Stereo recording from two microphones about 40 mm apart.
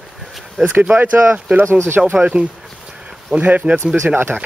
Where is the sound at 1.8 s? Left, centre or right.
Right.